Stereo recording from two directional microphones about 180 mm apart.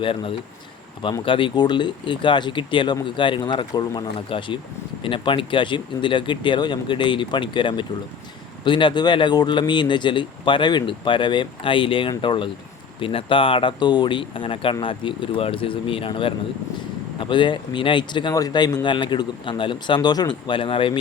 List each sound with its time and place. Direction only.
0.0 s speech: 30° left (ahead or behind)